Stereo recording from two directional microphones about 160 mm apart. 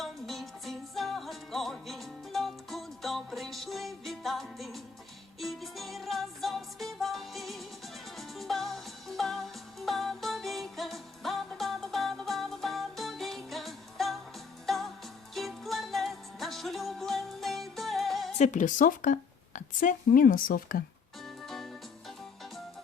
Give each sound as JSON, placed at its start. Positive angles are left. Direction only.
{"t": 0.0, "sound": "music", "side_deg": 0}
{"t": 18.3, "sound": "a woman's voice", "side_deg": 50}
{"t": 21.2, "sound": "music", "side_deg": 0}